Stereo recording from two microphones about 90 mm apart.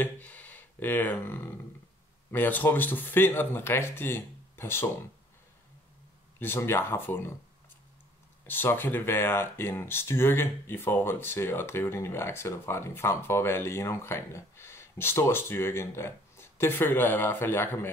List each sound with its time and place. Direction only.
0.0 s a sound: 20° left (ahead or behind)
2.3 s speech: 20° left (ahead or behind)
6.4 s speech: 25° left (ahead or behind)
8.5 s speech: 20° left (ahead or behind)